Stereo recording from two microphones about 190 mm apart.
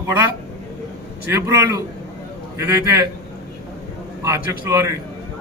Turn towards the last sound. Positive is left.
turn(degrees=-15)  # may be behind; listen again after turning